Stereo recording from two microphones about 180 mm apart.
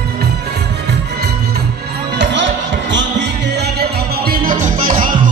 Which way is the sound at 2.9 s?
70° right (ahead or behind).